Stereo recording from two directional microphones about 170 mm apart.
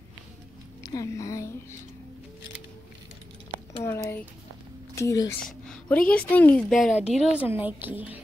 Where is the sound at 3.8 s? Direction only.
15° left (ahead or behind).